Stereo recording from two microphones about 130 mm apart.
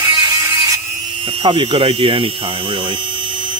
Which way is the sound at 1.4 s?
40° right (ahead or behind).